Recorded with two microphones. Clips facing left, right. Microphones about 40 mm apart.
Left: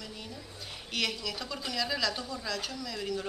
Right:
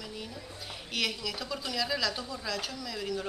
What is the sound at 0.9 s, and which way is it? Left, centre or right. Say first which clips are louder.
A woman's voice: even; centre.